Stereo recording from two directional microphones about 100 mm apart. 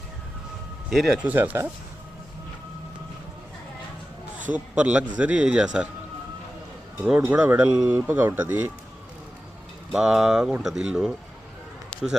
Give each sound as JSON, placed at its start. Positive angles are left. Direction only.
{"t": 0.9, "sound": "speech", "side_deg": 0}
{"t": 1.2, "sound": "speech", "side_deg": -15}
{"t": 4.5, "sound": "speech", "side_deg": -10}
{"t": 7.2, "sound": "speech", "side_deg": -15}
{"t": 9.9, "sound": "speech", "side_deg": -5}